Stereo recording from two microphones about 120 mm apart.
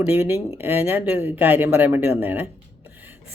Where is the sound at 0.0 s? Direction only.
15° right (ahead or behind).